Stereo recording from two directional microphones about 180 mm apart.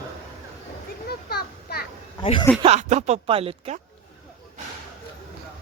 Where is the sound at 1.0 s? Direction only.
60° left (ahead or behind).